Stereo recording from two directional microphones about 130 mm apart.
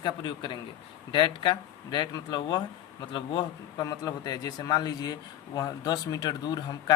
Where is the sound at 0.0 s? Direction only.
35° left (ahead or behind).